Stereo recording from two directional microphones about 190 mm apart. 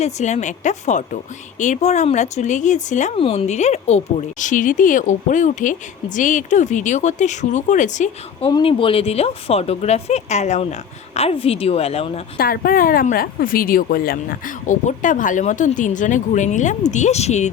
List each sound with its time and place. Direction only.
0.0 s speech: 35° left (ahead or behind)
8.4 s speech: 25° left (ahead or behind)
12.4 s speech: 50° left (ahead or behind)